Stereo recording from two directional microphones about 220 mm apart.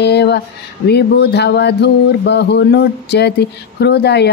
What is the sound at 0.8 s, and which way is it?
Music, 50° left (ahead or behind).